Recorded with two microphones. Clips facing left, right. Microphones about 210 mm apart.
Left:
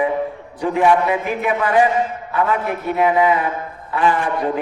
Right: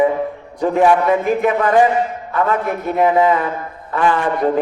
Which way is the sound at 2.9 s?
45° right (ahead or behind).